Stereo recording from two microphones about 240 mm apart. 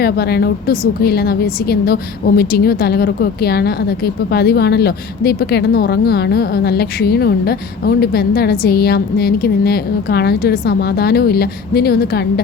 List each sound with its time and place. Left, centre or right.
0.0 s a woman's voice: left